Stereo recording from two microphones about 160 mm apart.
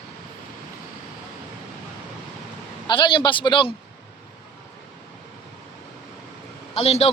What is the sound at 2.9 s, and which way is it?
Speech, 30° left (ahead or behind).